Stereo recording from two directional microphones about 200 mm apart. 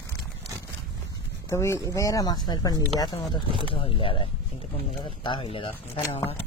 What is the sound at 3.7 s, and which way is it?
Speech, 25° left (ahead or behind).